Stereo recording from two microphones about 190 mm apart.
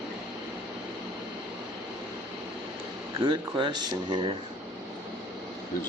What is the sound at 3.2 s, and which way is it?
Speech, 25° right (ahead or behind).